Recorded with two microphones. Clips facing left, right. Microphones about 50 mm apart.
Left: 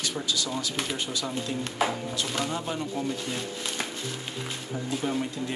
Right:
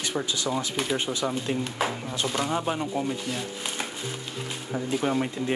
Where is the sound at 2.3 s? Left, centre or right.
Right.